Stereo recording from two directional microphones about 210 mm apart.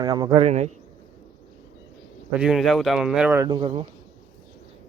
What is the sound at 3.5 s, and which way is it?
Speech, 25° right (ahead or behind).